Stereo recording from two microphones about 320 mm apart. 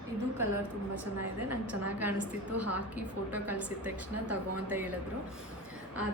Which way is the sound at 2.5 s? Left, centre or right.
Right.